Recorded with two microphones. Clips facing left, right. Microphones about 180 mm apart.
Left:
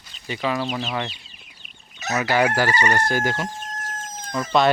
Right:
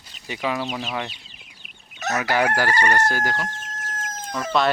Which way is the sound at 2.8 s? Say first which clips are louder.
Even; 15° left (ahead or behind).